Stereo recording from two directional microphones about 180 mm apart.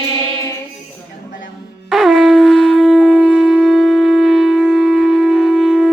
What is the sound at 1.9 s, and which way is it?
Shofar, centre (ahead or behind).